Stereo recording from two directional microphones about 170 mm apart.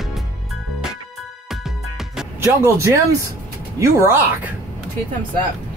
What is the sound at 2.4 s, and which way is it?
Speech, 15° right (ahead or behind).